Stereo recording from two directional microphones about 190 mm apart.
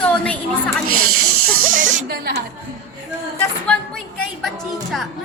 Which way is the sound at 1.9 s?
55° right (ahead or behind).